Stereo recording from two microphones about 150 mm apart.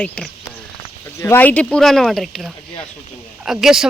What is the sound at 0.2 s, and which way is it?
A woman's voice, 10° left (ahead or behind).